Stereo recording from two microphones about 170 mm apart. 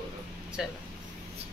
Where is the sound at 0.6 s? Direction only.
5° right (ahead or behind).